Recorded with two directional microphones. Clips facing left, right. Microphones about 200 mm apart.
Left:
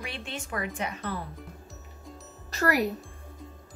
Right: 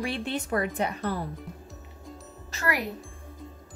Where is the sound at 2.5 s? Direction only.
40° left (ahead or behind).